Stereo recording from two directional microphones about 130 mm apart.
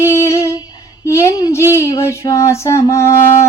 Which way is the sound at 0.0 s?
20° left (ahead or behind).